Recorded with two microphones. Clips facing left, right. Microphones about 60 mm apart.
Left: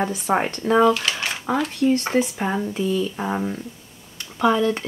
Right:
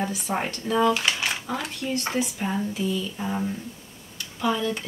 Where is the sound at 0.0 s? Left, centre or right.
Left.